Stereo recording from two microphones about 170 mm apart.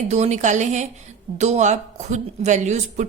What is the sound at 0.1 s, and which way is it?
Speech, 45° right (ahead or behind).